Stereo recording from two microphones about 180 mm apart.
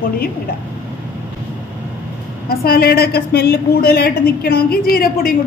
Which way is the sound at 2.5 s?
55° left (ahead or behind).